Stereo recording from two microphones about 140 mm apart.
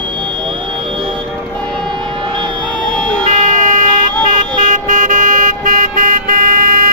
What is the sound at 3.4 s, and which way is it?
Vehicle, 70° right (ahead or behind).